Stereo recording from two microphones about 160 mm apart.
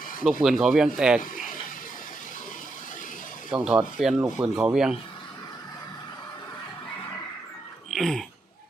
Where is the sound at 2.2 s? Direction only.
55° left (ahead or behind).